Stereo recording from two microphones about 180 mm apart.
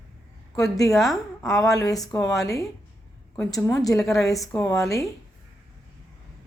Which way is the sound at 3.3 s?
15° left (ahead or behind).